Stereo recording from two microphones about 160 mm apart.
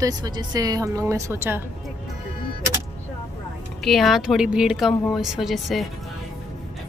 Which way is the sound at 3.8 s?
Centre (ahead or behind).